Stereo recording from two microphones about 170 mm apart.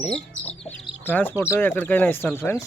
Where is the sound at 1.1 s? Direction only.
10° left (ahead or behind).